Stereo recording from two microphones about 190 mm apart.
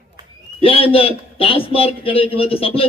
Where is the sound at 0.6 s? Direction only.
30° left (ahead or behind).